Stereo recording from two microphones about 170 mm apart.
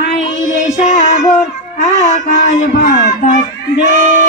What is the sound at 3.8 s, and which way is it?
Child singing, 50° right (ahead or behind).